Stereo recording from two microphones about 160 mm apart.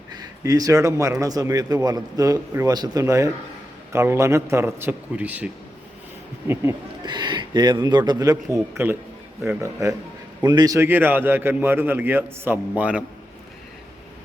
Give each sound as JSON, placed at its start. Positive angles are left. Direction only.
{"t": 0.1, "sound": "a man's voice", "side_deg": -25}
{"t": 6.5, "sound": "a man's voice", "side_deg": -15}
{"t": 7.0, "sound": "a man's voice", "side_deg": -25}